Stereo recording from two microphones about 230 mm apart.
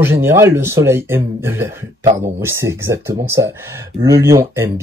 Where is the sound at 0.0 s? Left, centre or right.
Centre.